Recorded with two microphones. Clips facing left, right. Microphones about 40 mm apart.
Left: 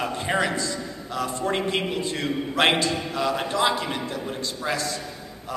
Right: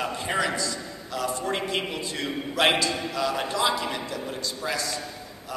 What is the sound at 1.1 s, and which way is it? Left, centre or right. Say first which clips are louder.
A man's voice: left 2 dB; left.